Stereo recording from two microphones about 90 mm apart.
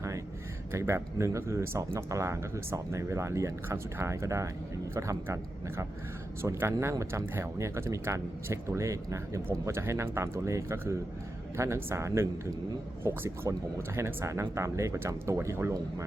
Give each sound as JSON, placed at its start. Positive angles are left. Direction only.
{"t": 0.7, "sound": "speech", "side_deg": -30}